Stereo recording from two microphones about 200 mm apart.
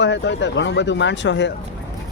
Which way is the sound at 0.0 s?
65° left (ahead or behind).